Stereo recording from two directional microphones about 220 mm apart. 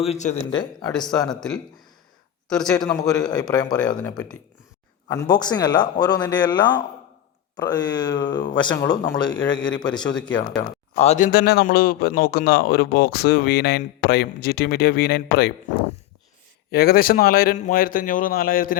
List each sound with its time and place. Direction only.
0.0 s speech: 30° left (ahead or behind)
0.5 s speech: 20° left (ahead or behind)
0.9 s speech: centre (ahead or behind)
2.7 s speech: 15° left (ahead or behind)
5.0 s speech: 15° left (ahead or behind)
9.6 s a man's voice: 20° left (ahead or behind); by 15.5 s 45° left (ahead or behind)
16.7 s a man's voice: 45° left (ahead or behind)